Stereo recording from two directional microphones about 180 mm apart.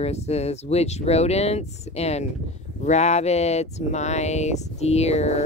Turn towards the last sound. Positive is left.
turn(degrees=35)  # may be behind; listen again after turning